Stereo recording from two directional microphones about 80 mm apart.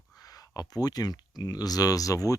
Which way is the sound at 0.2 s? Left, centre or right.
Left.